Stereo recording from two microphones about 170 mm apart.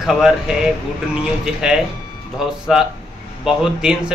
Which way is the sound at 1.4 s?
5° right (ahead or behind).